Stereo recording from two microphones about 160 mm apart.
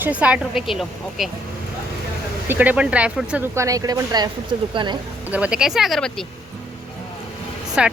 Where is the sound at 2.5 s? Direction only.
10° right (ahead or behind).